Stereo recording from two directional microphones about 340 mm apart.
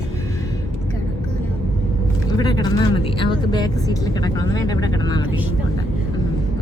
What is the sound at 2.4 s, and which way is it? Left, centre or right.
Speech, centre.